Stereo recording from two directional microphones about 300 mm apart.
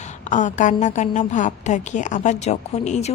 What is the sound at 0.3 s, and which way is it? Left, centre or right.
A woman's voice, left.